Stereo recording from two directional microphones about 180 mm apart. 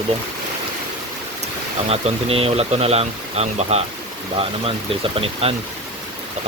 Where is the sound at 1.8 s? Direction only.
35° right (ahead or behind).